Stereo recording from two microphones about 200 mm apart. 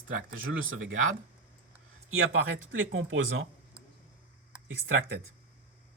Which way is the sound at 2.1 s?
90° right.